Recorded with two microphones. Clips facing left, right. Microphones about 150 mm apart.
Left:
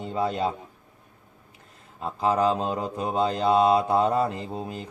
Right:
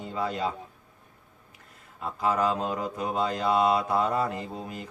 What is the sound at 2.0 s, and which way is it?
Mantra, 25° left (ahead or behind).